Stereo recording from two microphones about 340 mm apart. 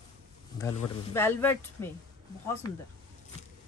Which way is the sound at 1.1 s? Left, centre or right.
Centre.